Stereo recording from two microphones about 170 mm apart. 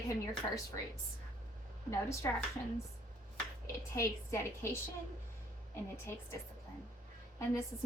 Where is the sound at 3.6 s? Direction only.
15° left (ahead or behind).